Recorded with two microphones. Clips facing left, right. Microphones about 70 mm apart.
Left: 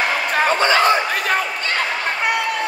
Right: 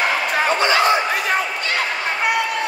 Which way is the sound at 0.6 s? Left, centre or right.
Left.